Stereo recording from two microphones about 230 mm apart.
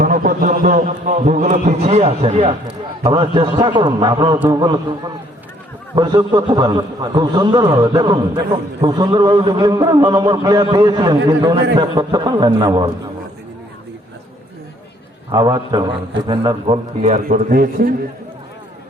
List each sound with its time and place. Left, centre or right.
0.0 s a man's voice: right; by 12.9 s centre
15.3 s a man's voice: centre; by 17.9 s right